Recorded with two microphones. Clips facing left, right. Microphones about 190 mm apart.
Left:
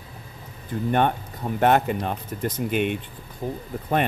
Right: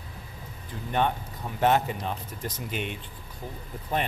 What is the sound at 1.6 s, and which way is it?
Speech, 55° left (ahead or behind).